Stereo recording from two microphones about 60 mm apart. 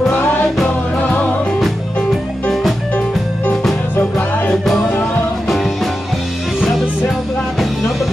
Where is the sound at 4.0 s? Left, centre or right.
Left.